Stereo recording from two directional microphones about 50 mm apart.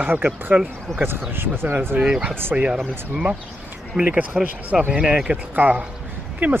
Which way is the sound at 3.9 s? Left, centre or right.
Right.